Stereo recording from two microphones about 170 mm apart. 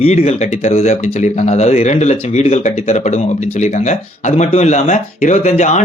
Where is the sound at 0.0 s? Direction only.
40° left (ahead or behind).